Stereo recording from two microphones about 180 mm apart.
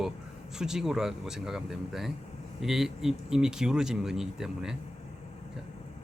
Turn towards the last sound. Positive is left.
turn(degrees=-5)  # may be behind; listen again after turning